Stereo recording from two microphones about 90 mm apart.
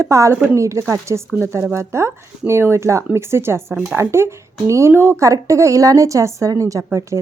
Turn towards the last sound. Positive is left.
turn(degrees=-30)  # may be behind; listen again after turning